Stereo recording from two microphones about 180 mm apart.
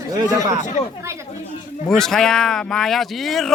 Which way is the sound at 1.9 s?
Centre (ahead or behind).